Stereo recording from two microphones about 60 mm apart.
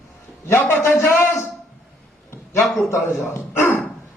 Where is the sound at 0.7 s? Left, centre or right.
Left.